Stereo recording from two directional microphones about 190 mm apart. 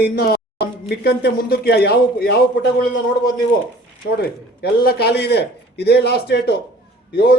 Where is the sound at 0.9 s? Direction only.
55° left (ahead or behind).